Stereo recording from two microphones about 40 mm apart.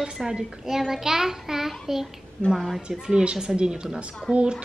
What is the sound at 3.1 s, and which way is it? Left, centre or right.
Speech, centre.